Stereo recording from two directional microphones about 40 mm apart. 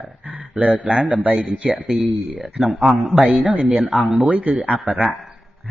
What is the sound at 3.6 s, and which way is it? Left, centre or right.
A man's voice, right.